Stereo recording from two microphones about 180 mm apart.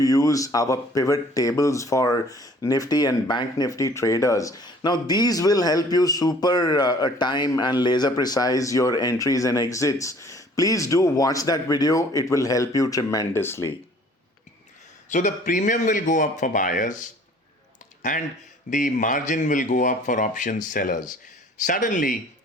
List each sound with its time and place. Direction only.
0.0 s speech: 20° left (ahead or behind)
15.1 s speech: 45° left (ahead or behind)
18.1 s speech: 50° left (ahead or behind)